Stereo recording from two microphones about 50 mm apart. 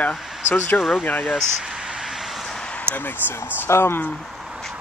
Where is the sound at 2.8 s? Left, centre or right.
Left.